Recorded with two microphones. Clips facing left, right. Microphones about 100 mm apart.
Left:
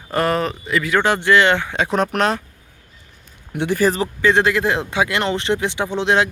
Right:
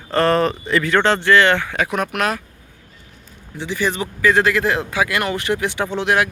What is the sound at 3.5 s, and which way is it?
Speech, 55° left (ahead or behind).